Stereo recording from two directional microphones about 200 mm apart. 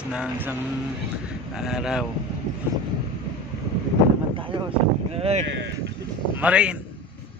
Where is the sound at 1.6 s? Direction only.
5° right (ahead or behind).